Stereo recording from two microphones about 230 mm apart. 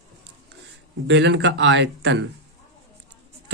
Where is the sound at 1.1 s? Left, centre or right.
Right.